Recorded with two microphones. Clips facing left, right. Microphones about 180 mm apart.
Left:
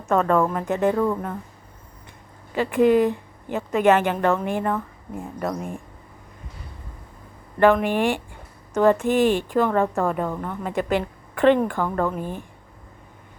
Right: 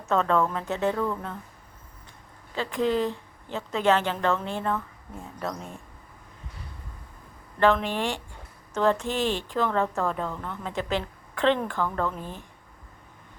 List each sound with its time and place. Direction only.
0.0 s speech: 10° left (ahead or behind)
0.7 s speech: 55° left (ahead or behind)
0.9 s a woman's voice: 15° left (ahead or behind)
2.8 s a woman's voice: 15° left (ahead or behind)
7.6 s a woman's voice: 15° left (ahead or behind)
10.7 s speech: 55° left (ahead or behind)
11.3 s a woman's voice: 10° left (ahead or behind)